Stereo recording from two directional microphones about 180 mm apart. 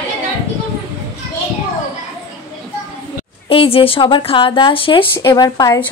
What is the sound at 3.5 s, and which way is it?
A woman's voice, 30° left (ahead or behind).